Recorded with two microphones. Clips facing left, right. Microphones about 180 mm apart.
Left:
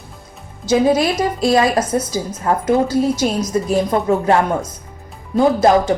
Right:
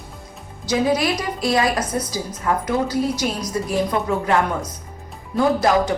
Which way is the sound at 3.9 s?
40° left (ahead or behind).